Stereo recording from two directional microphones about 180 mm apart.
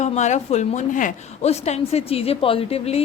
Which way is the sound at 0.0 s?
40° left (ahead or behind).